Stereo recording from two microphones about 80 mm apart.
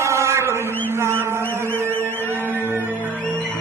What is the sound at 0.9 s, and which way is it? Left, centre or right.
Mantra, right.